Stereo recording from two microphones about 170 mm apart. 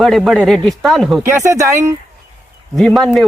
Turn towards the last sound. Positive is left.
turn(degrees=0)  # may be behind; listen again after turning